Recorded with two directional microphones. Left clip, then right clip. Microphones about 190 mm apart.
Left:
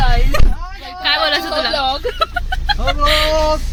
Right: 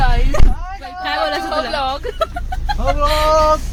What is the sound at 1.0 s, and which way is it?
Speech, 10° right (ahead or behind).